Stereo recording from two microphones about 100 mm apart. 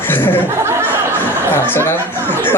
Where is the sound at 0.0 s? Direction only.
20° left (ahead or behind).